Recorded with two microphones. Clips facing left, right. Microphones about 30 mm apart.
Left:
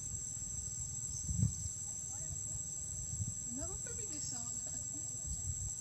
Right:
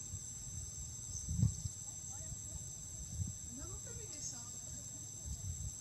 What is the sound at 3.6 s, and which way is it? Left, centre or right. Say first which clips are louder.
Snake: left 5 dB; left.